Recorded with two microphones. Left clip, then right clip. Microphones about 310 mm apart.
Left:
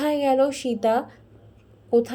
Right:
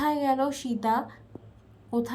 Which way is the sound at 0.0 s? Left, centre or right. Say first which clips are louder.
Left 5 dB; centre.